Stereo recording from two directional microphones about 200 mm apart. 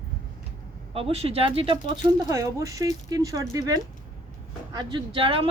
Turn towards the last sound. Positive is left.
turn(degrees=-25)  # may be behind; listen again after turning